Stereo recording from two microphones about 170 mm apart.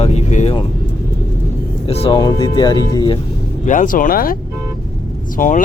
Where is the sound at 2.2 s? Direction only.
25° left (ahead or behind).